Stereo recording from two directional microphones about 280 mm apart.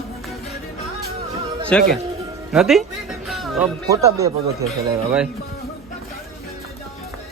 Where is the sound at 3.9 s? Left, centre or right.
Centre.